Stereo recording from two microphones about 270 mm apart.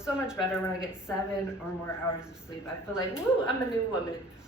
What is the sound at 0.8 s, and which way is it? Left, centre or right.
Speech, centre.